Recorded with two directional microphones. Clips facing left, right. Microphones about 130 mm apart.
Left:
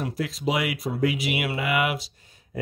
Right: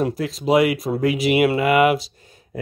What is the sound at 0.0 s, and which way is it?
Speech, 40° right (ahead or behind).